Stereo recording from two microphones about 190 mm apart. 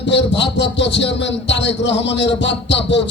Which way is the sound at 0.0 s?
65° left (ahead or behind).